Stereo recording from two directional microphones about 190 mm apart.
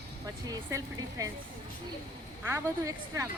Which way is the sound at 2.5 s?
15° right (ahead or behind).